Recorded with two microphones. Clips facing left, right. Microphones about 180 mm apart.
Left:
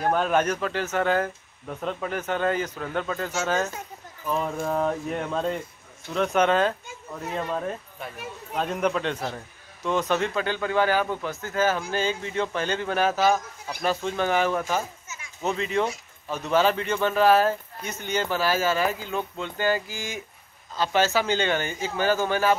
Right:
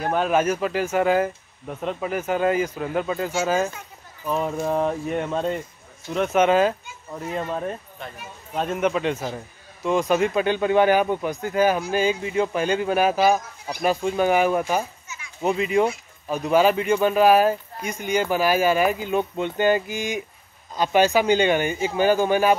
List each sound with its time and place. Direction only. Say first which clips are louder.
0.0 s speech: right 2 dB; 5° right (ahead or behind)
8.0 s speech: even; 5° left (ahead or behind)
8.5 s speech: right 2 dB; 5° right (ahead or behind)
15.0 s children playing: right 2 dB; 45° left (ahead or behind)
15.4 s speech: right 5 dB; 10° right (ahead or behind)